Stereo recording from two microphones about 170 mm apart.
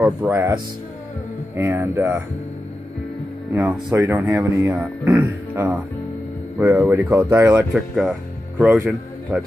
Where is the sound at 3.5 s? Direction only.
15° right (ahead or behind).